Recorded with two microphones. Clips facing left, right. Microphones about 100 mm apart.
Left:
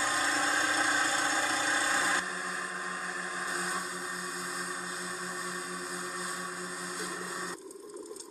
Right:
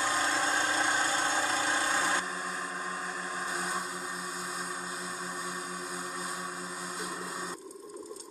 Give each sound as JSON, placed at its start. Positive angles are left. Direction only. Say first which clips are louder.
{"t": 0.0, "sound": "vehicle", "louder": "right 1 dB", "side_deg": -40}